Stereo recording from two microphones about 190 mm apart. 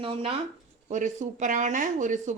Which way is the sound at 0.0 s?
30° right (ahead or behind).